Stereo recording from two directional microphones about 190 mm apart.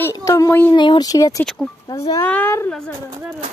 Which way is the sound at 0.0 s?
15° left (ahead or behind).